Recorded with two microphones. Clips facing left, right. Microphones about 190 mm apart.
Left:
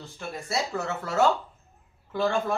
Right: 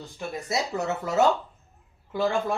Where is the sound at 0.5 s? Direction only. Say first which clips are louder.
Right 2 dB; 20° right (ahead or behind).